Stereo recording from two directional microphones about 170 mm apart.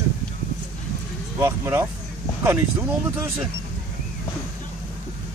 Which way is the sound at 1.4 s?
15° right (ahead or behind).